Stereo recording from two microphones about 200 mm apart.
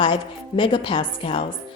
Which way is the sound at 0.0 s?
25° left (ahead or behind).